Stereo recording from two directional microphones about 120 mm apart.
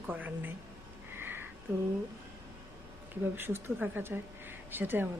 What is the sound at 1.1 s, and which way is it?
Sniff, 20° right (ahead or behind).